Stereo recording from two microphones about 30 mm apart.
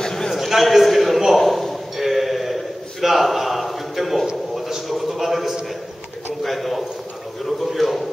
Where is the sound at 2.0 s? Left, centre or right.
Centre.